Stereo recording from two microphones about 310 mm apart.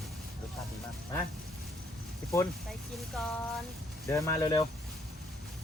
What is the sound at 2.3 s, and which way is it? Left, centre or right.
Speech, centre.